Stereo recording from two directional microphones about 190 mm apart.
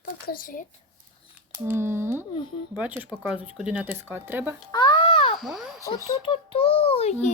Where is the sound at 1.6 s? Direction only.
10° right (ahead or behind).